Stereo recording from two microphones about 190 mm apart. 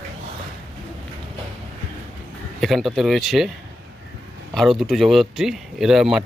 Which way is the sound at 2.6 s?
Centre (ahead or behind).